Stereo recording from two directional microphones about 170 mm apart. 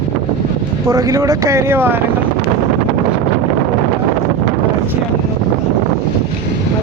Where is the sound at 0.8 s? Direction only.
20° right (ahead or behind).